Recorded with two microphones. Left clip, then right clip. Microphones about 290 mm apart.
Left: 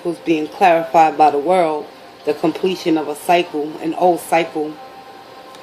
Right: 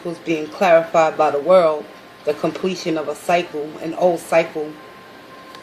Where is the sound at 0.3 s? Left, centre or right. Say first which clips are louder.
Left 2 dB; centre.